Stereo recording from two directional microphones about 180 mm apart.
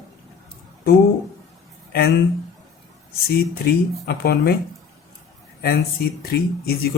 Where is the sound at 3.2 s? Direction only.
60° left (ahead or behind).